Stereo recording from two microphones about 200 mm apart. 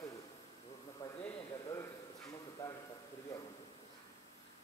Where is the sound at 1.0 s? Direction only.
15° left (ahead or behind).